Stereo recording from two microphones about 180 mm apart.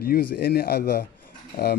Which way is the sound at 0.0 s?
60° left (ahead or behind).